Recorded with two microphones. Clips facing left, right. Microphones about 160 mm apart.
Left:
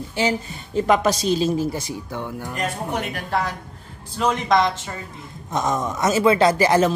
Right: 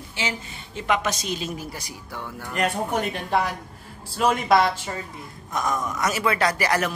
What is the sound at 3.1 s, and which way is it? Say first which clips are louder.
Speech: even; 15° right (ahead or behind).